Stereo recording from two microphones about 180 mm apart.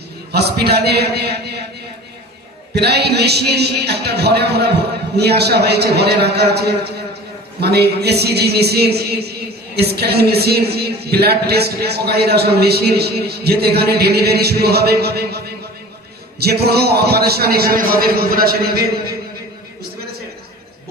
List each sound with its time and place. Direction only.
0.3 s speech: 65° right (ahead or behind)
2.7 s speech: 65° right (ahead or behind)